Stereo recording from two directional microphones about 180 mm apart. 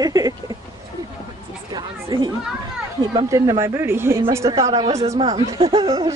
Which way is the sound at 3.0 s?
25° right (ahead or behind).